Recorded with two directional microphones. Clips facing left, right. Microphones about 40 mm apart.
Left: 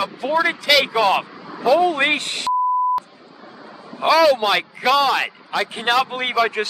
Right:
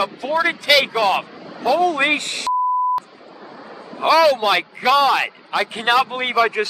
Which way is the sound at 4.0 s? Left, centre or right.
Centre.